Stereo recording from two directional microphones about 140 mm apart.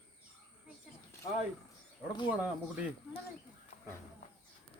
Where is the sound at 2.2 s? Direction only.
10° right (ahead or behind).